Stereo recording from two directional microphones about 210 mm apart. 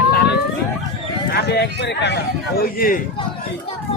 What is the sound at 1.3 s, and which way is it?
Speech, 50° left (ahead or behind).